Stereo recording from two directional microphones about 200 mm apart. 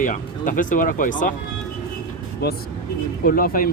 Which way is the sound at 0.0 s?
40° left (ahead or behind).